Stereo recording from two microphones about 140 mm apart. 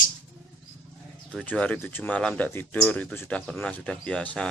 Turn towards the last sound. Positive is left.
turn(degrees=5)  # may be behind; listen again after turning